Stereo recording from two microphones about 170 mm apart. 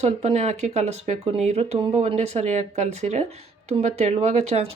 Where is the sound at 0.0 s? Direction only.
40° right (ahead or behind).